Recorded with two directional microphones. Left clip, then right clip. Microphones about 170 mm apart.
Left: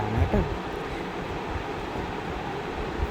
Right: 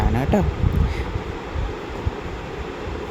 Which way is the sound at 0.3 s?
55° right (ahead or behind).